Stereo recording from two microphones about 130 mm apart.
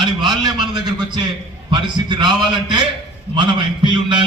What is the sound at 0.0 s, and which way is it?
A man's voice, 35° right (ahead or behind).